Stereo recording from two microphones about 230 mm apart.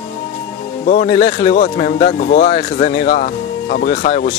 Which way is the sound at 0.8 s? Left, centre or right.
Left.